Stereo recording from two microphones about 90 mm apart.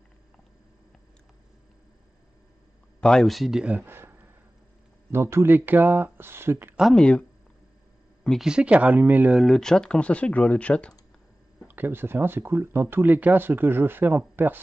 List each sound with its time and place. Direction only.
3.0 s speech: centre (ahead or behind)
3.7 s speech: 25° right (ahead or behind)
6.8 s speech: 5° left (ahead or behind)
8.5 s speech: 10° right (ahead or behind)
9.3 s speech: centre (ahead or behind)
11.6 s speech: 20° right (ahead or behind)